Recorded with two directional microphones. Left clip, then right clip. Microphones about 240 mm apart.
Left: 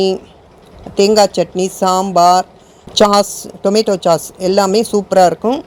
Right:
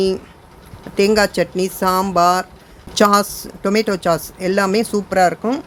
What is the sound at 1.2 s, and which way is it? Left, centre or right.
Speech, right.